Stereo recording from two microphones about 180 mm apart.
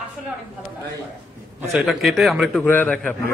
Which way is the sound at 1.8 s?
Centre (ahead or behind).